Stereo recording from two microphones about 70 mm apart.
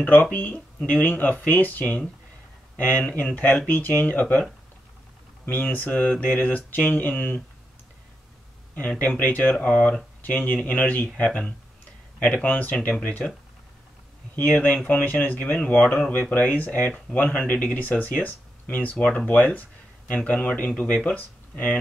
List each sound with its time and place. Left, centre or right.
0.0 s speech: left
8.7 s speech: left
14.3 s speech: left